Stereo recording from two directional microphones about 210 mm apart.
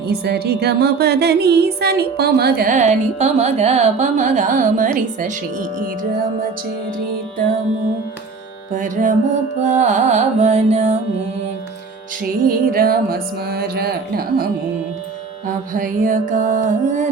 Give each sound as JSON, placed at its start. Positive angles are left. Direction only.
{"t": 0.0, "sound": "speech", "side_deg": -50}
{"t": 8.7, "sound": "speech", "side_deg": -40}
{"t": 12.5, "sound": "music", "side_deg": -45}
{"t": 15.4, "sound": "speech", "side_deg": -40}